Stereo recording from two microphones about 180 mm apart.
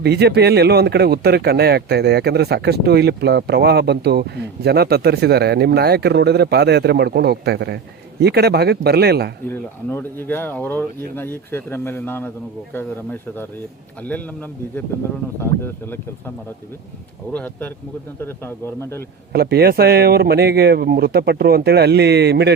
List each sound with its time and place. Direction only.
0.0 s speech: 65° right (ahead or behind)
9.5 s speech: 10° left (ahead or behind)
15.4 s speech: 10° left (ahead or behind)
17.3 s speech: 10° left (ahead or behind)
19.3 s speech: 60° right (ahead or behind)